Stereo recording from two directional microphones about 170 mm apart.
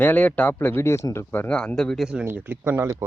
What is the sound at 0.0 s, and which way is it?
A man's voice, 10° left (ahead or behind).